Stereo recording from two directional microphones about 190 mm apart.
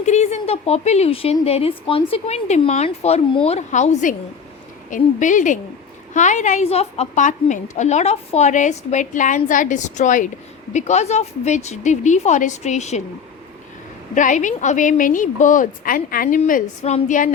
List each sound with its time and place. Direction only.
0.0 s speech: 35° left (ahead or behind)
14.2 s a woman's voice: 40° left (ahead or behind)